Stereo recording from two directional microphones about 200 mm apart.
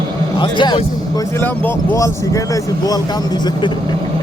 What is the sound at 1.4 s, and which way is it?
Speech, 10° left (ahead or behind).